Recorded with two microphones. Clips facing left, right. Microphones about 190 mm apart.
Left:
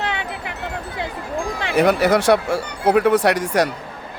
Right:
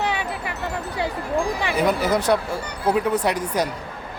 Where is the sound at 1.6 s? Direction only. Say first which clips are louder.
Left 9 dB; 75° left (ahead or behind).